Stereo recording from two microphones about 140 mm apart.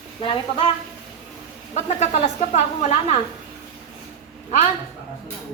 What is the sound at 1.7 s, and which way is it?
Speech, 55° left (ahead or behind).